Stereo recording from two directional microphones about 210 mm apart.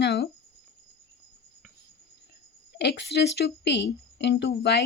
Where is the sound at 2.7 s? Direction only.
55° left (ahead or behind).